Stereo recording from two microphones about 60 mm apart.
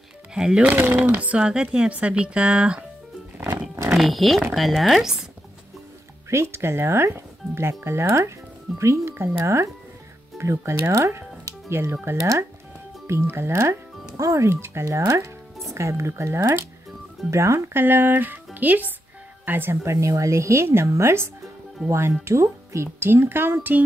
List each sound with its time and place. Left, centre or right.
0.3 s speech: centre
0.7 s speech: right
1.4 s a woman's voice: centre
3.9 s speech: centre
6.3 s speech: right
9.4 s speech: right
11.7 s speech: right
12.2 s speech: right
13.0 s speech: right
14.1 s speech: right
14.5 s speech: right
17.3 s speech: right
17.7 s speech: right
22.9 s speech: right